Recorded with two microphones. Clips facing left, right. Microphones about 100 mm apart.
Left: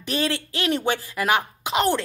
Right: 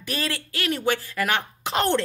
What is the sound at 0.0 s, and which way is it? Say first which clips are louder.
Speech: left 4 dB; 25° left (ahead or behind).